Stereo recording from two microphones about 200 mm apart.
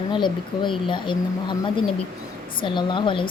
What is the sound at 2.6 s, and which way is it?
Speech, 25° left (ahead or behind).